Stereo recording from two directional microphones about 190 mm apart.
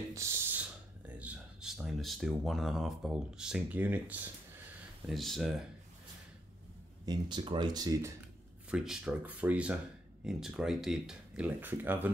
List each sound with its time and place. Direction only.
0.1 s speech: 15° right (ahead or behind)
5.1 s speech: centre (ahead or behind)
7.1 s speech: 25° right (ahead or behind)
8.6 s speech: 5° right (ahead or behind)